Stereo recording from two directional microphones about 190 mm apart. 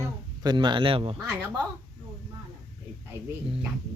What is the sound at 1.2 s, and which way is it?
Speech, 10° right (ahead or behind).